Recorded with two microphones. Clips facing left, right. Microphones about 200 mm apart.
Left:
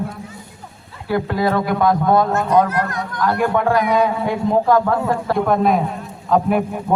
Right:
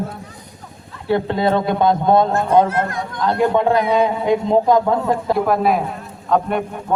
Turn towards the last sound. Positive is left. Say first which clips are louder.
# left 2 dB
turn(degrees=5)  # may be behind; listen again after turning